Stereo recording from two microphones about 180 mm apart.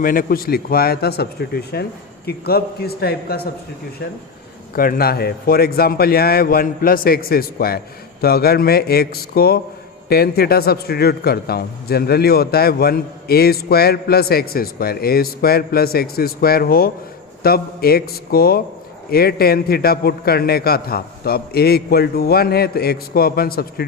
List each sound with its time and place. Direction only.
0.0 s a man's voice: 50° left (ahead or behind)
4.7 s a man's voice: 55° left (ahead or behind)